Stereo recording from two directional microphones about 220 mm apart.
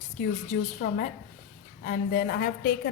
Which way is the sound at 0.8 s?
40° left (ahead or behind).